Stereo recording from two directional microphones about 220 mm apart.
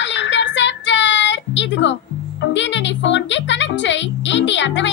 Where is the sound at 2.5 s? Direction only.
55° left (ahead or behind).